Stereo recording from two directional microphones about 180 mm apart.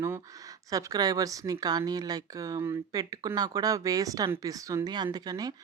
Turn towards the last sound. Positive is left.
turn(degrees=-20)  # may be behind; listen again after turning